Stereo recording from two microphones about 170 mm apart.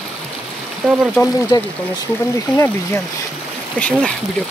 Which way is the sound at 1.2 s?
15° left (ahead or behind).